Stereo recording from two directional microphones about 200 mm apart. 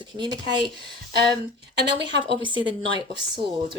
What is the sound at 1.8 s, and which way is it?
Speech, 60° right (ahead or behind).